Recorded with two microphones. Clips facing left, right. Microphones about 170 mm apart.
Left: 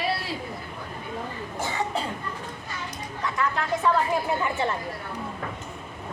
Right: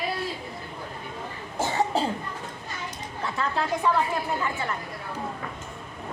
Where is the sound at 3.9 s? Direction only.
10° right (ahead or behind).